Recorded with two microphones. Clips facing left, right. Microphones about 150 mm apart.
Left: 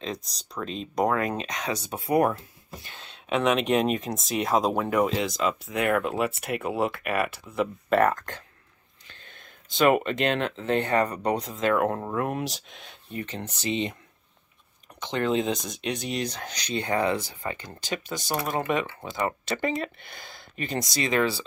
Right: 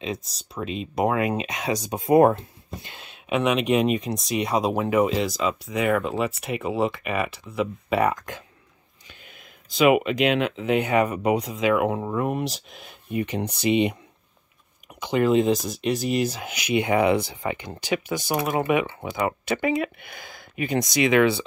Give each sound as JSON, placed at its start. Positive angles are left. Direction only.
{"t": 0.0, "sound": "speech", "side_deg": -5}
{"t": 13.1, "sound": "speech", "side_deg": -15}
{"t": 15.0, "sound": "speech", "side_deg": -10}
{"t": 20.8, "sound": "speech", "side_deg": -15}